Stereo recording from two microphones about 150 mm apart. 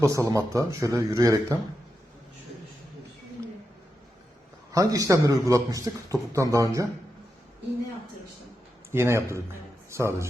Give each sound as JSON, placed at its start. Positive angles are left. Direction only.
{"t": 0.0, "sound": "speech", "side_deg": -20}
{"t": 4.7, "sound": "speech", "side_deg": -25}
{"t": 8.9, "sound": "a man's voice", "side_deg": -15}